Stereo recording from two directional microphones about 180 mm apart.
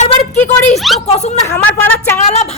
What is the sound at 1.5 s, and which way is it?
Speech, 10° left (ahead or behind).